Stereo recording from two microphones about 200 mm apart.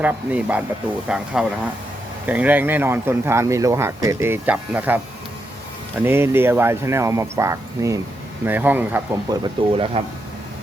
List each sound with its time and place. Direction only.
0.0 s a man's voice: 10° right (ahead or behind)
6.0 s a man's voice: 10° right (ahead or behind)
9.4 s speech: 25° right (ahead or behind)